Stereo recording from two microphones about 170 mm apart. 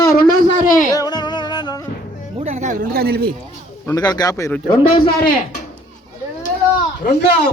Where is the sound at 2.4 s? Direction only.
45° right (ahead or behind).